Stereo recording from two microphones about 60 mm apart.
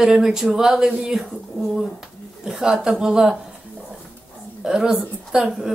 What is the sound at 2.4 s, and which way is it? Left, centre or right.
Speech, centre.